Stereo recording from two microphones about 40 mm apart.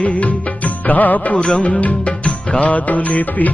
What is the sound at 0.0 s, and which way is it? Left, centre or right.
Music, left.